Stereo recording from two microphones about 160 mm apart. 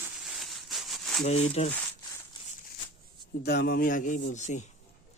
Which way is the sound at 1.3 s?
40° left (ahead or behind).